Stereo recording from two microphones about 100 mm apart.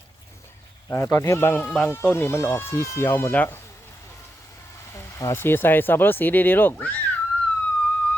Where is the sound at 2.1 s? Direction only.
25° left (ahead or behind).